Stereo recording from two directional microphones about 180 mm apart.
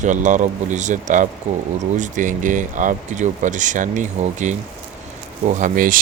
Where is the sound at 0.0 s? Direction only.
45° right (ahead or behind).